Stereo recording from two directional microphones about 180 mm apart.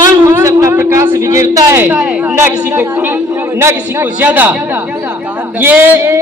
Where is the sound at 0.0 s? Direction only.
15° right (ahead or behind).